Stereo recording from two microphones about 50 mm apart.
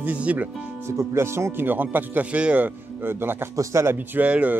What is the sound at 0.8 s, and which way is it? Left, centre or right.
Speech, right.